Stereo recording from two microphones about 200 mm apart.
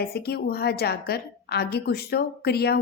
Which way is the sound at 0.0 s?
50° left (ahead or behind).